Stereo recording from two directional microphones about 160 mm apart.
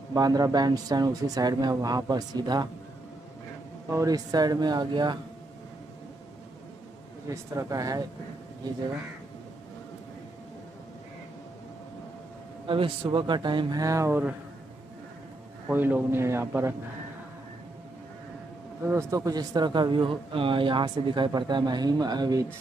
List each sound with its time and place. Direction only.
0.1 s a man's voice: 25° right (ahead or behind)
3.9 s a man's voice: 20° right (ahead or behind)
7.2 s a man's voice: 20° right (ahead or behind)
12.6 s a man's voice: 35° right (ahead or behind); by 14.3 s 15° right (ahead or behind)
15.7 s a man's voice: 10° right (ahead or behind)
18.9 s a man's voice: 20° right (ahead or behind)